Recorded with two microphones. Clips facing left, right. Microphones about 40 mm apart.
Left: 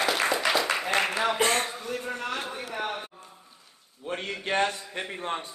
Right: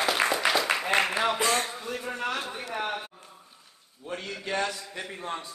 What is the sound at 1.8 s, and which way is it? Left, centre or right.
Speech, centre.